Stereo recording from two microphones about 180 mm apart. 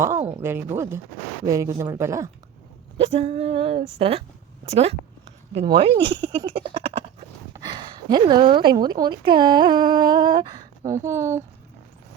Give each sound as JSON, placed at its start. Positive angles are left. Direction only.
{"t": 0.0, "sound": "speech", "side_deg": -15}
{"t": 3.0, "sound": "speech", "side_deg": -30}
{"t": 6.3, "sound": "a sound", "side_deg": -25}
{"t": 7.5, "sound": "speech", "side_deg": -25}